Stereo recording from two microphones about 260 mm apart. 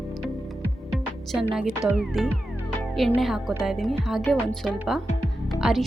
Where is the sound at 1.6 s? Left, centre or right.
Centre.